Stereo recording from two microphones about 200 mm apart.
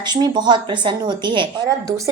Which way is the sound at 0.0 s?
20° right (ahead or behind).